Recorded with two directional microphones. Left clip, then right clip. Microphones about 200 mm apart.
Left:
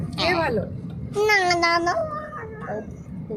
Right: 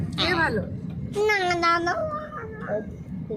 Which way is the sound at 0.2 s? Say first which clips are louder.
Left 2 dB; 55° left (ahead or behind).